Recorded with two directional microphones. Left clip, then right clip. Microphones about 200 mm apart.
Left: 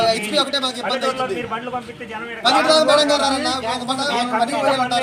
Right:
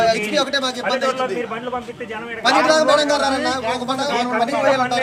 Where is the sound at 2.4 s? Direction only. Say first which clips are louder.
Even; 5° right (ahead or behind).